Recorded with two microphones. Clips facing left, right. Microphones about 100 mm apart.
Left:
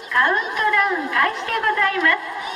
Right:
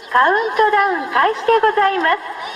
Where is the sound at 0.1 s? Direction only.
40° right (ahead or behind).